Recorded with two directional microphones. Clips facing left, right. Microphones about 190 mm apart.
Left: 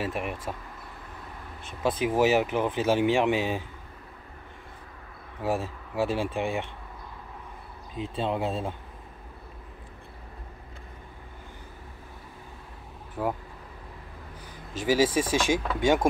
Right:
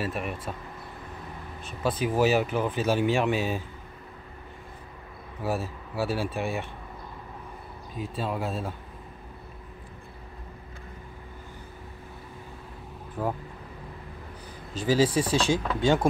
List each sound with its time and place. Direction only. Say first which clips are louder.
0.0 s speech: even; 20° left (ahead or behind)
1.8 s speech: left 1 dB; 20° left (ahead or behind)
5.4 s speech: left 1 dB; 15° left (ahead or behind)
7.9 s speech: left 2 dB; 25° left (ahead or behind)
13.2 s speech: left 1 dB; 5° left (ahead or behind)
14.8 s speech: even; 15° left (ahead or behind)